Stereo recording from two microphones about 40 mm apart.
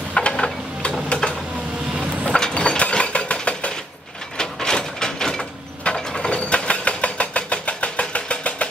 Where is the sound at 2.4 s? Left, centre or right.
Left.